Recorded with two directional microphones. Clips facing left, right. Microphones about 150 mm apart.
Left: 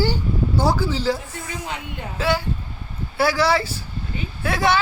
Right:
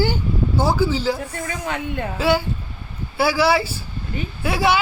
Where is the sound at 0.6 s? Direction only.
5° right (ahead or behind).